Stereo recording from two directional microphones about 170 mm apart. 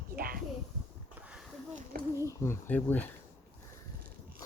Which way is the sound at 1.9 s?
60° right (ahead or behind).